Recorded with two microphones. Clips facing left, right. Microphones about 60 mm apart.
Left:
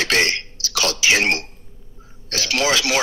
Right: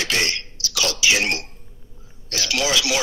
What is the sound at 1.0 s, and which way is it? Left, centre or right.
A man's voice, left.